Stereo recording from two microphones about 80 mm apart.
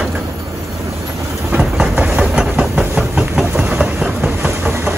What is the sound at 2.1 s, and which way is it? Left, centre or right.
Train, centre.